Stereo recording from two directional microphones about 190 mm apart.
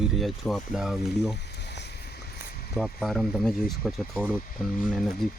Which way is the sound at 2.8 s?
Centre (ahead or behind).